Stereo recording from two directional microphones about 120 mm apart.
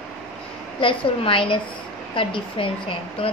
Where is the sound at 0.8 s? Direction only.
45° left (ahead or behind).